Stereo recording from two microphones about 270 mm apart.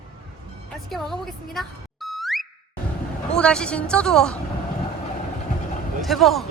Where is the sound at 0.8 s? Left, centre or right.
Centre.